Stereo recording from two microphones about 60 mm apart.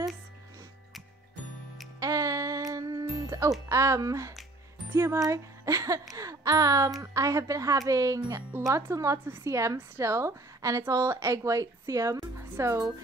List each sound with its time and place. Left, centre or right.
2.0 s music: right
3.6 s a woman's voice: right
7.0 s a woman's voice: right